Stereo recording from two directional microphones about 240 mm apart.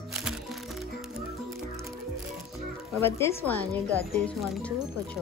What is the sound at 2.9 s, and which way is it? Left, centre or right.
A woman's voice, centre.